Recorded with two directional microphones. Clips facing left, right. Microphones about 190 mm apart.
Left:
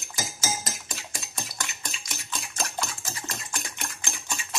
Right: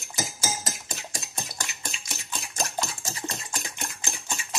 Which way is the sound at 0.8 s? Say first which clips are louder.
Right 2 dB; 35° right (ahead or behind).